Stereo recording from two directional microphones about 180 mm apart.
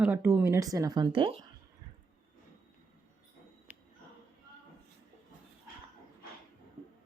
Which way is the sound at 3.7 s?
10° right (ahead or behind).